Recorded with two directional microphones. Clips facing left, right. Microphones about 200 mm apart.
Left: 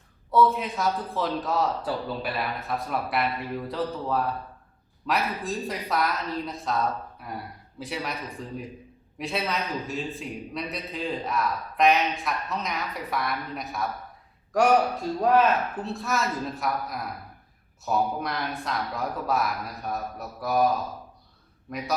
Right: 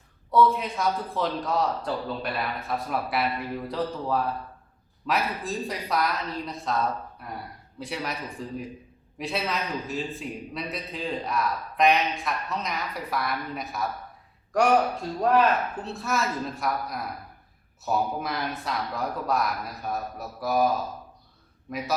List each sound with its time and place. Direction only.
0.3 s a man's voice: centre (ahead or behind)
15.2 s a man's voice: centre (ahead or behind)
21.7 s a man's voice: centre (ahead or behind)